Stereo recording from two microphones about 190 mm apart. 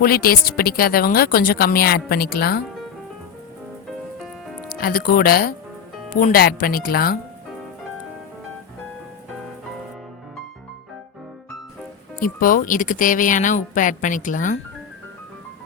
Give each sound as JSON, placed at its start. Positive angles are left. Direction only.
{"t": 0.0, "sound": "a woman's voice", "side_deg": 50}
{"t": 4.7, "sound": "a woman's voice", "side_deg": 50}
{"t": 12.2, "sound": "a woman's voice", "side_deg": 45}